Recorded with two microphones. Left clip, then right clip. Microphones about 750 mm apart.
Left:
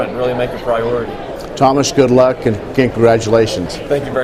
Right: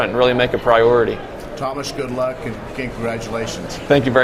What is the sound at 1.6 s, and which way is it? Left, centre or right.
Speech, left.